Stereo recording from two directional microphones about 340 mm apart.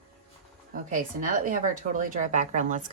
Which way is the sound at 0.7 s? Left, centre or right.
Right.